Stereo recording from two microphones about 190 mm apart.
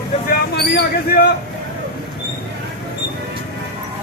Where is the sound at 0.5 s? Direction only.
55° left (ahead or behind).